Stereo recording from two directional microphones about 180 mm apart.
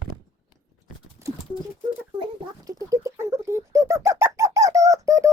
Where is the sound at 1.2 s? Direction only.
15° right (ahead or behind).